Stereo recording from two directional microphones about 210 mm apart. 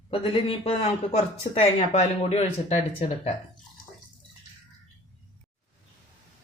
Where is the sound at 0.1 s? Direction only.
25° left (ahead or behind).